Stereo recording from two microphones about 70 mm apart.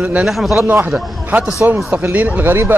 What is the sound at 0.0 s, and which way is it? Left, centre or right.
Speech, centre.